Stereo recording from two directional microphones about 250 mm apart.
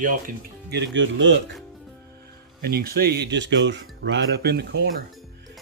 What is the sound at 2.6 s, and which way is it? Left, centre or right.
Speech, right.